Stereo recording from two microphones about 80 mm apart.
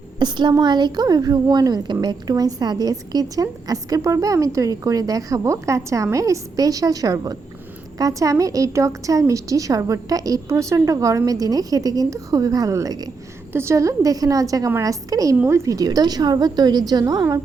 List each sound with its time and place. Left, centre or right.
0.2 s a woman's voice: right
13.5 s a woman's voice: right